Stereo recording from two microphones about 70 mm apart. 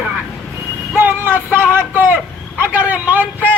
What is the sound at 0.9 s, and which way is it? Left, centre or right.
Music, right.